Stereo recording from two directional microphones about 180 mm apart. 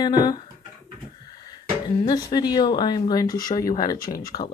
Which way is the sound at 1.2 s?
25° left (ahead or behind).